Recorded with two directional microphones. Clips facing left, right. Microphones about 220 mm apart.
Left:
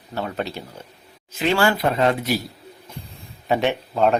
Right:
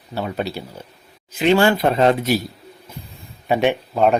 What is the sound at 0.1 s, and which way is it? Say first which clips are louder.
A man's voice: right 2 dB; 10° right (ahead or behind).